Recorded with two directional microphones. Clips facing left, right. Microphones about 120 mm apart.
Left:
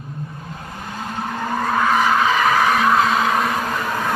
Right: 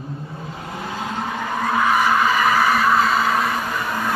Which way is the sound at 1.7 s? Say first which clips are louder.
Even; 5° right (ahead or behind).